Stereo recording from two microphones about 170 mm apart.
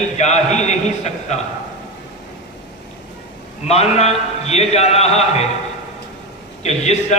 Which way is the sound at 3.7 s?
40° left (ahead or behind).